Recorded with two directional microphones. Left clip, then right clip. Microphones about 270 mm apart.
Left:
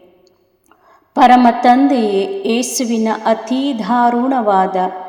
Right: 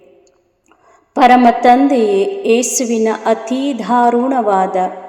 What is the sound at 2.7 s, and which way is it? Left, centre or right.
Speech, left.